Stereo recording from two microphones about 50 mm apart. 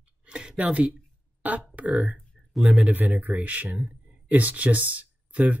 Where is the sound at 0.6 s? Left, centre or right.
Right.